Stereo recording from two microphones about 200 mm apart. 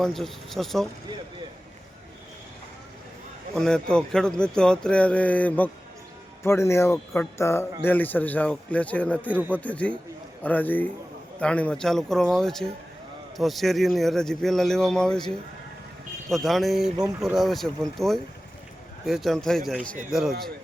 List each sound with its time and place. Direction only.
0.0 s speech: centre (ahead or behind)
3.5 s a man's voice: 5° left (ahead or behind)
16.3 s speech: centre (ahead or behind)